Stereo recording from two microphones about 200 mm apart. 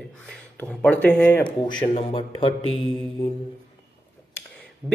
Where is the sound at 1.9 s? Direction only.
25° left (ahead or behind).